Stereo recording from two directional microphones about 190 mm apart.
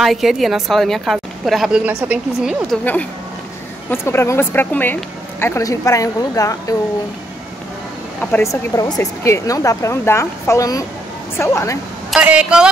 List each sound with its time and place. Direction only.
0.0 s a woman's voice: centre (ahead or behind)
2.8 s speech: 10° left (ahead or behind)
8.2 s speech: 10° left (ahead or behind)
12.1 s a woman's voice: 5° right (ahead or behind)